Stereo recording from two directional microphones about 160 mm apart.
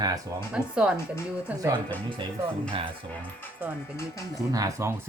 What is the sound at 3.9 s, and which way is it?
Speech, 20° left (ahead or behind).